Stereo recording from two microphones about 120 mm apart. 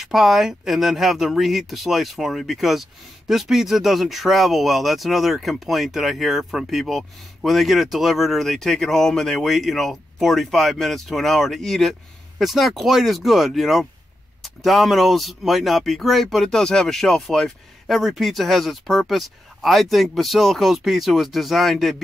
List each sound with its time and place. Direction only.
0.0 s speech: 5° right (ahead or behind)